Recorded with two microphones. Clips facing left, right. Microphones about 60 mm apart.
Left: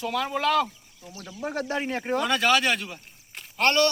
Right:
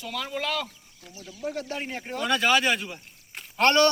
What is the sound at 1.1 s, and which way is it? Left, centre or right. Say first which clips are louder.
Speech: left 2 dB; left.